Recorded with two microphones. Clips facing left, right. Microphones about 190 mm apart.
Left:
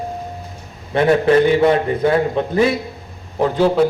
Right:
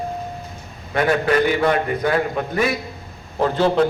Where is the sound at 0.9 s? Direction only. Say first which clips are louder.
Left 5 dB; 25° left (ahead or behind).